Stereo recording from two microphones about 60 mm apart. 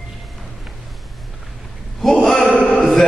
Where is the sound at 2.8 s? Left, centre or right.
Centre.